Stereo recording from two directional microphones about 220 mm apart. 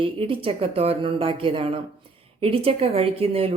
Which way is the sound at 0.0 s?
25° right (ahead or behind).